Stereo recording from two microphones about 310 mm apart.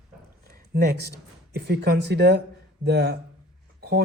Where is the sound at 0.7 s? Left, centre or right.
Right.